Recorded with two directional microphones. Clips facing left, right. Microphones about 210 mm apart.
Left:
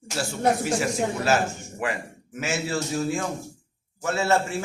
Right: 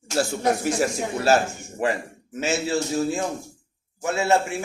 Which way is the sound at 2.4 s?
25° right (ahead or behind).